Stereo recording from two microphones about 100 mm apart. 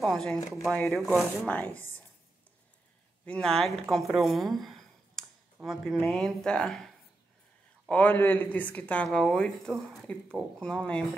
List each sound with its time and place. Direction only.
0.0 s speech: 5° left (ahead or behind)
3.3 s speech: 5° left (ahead or behind)
7.9 s speech: 20° left (ahead or behind)